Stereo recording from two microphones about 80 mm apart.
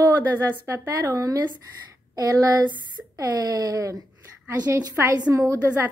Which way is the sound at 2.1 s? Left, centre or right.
Right.